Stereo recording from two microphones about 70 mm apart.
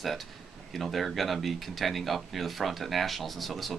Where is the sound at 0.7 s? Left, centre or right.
Centre.